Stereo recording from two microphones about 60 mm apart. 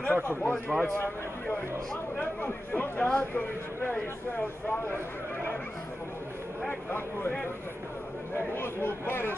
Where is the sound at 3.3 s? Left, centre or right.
Left.